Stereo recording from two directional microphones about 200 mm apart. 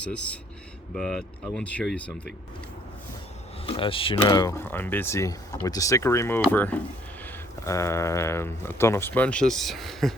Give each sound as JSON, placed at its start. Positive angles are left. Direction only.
{"t": 0.0, "sound": "speech", "side_deg": 5}
{"t": 3.7, "sound": "speech", "side_deg": 25}